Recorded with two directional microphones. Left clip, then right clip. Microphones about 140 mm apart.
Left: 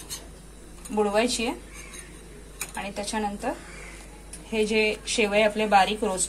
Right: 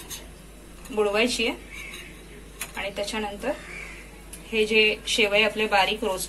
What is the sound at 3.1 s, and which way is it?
A woman's voice, 50° left (ahead or behind).